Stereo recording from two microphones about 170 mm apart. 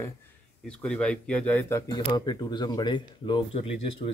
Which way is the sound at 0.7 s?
5° left (ahead or behind).